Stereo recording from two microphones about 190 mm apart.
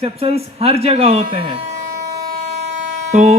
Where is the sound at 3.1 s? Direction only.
35° right (ahead or behind).